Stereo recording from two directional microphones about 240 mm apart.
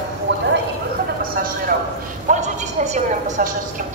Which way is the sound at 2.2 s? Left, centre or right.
Right.